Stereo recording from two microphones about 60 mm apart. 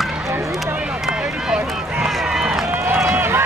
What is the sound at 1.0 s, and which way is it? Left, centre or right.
Run, centre.